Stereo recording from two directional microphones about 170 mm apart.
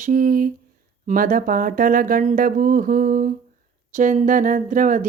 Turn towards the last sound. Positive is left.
turn(degrees=-50)  # may be behind; listen again after turning